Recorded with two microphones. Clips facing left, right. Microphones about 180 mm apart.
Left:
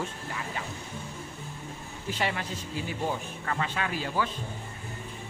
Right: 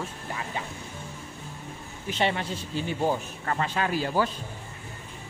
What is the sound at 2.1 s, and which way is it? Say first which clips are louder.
Speech: right 5 dB; 25° right (ahead or behind).